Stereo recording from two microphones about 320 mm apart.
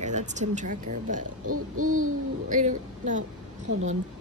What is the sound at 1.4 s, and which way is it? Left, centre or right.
Hoot, right.